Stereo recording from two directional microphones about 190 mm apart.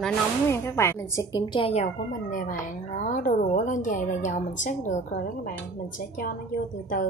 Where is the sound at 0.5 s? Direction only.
15° left (ahead or behind).